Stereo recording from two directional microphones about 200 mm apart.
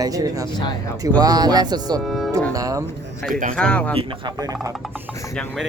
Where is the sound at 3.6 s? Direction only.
5° left (ahead or behind).